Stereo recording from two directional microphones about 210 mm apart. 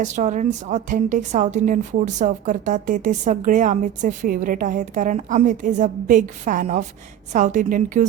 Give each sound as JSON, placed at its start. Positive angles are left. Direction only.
{"t": 0.0, "sound": "a woman's voice", "side_deg": -35}